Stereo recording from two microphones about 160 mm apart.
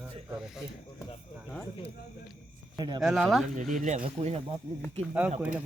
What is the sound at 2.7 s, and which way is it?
Speech, 25° right (ahead or behind).